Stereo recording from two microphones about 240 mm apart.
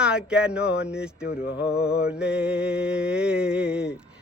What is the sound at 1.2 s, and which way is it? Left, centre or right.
Mantra, left.